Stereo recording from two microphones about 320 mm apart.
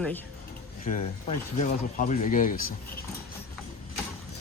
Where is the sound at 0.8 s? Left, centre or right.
Left.